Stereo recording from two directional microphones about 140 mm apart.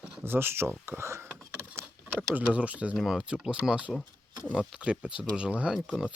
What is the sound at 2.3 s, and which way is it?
Speech, 10° right (ahead or behind).